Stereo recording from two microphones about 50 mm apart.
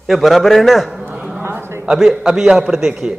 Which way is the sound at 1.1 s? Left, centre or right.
Centre.